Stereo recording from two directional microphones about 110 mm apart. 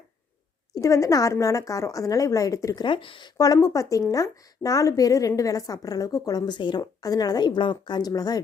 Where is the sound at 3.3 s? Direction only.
35° left (ahead or behind).